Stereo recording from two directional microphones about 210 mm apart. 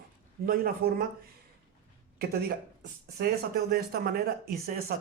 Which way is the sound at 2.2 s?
45° right (ahead or behind).